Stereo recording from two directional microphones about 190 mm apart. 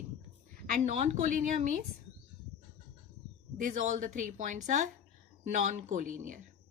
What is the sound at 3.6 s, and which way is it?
A woman's voice, 40° right (ahead or behind).